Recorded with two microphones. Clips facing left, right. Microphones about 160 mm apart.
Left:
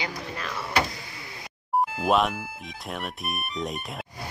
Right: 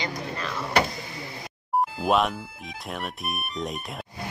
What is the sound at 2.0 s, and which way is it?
Speech, centre (ahead or behind).